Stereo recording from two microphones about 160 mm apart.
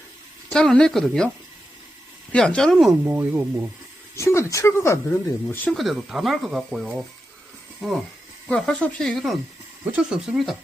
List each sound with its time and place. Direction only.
0.5 s speech: 5° left (ahead or behind)
2.3 s speech: 5° left (ahead or behind)
3.0 s speech: 15° right (ahead or behind)
4.1 s speech: 15° left (ahead or behind)
5.7 s speech: centre (ahead or behind)